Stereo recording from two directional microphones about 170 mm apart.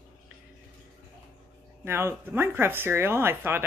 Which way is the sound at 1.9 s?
15° right (ahead or behind).